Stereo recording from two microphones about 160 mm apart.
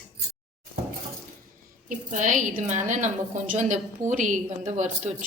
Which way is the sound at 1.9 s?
50° right (ahead or behind).